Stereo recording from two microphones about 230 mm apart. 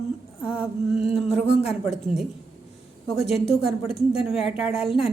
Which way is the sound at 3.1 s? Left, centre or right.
Left.